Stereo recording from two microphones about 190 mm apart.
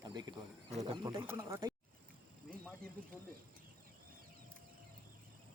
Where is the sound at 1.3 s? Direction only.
15° right (ahead or behind).